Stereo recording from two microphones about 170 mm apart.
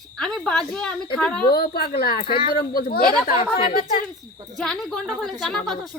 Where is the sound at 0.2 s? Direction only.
5° left (ahead or behind).